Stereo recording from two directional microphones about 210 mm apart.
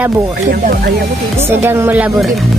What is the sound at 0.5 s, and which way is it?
Speech, 45° right (ahead or behind).